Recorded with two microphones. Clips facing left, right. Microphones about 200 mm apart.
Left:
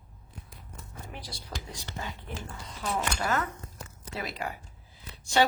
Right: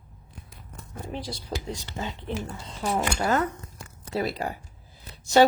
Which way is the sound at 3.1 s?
35° right (ahead or behind).